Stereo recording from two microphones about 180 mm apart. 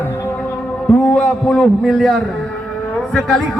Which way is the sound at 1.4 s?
Centre (ahead or behind).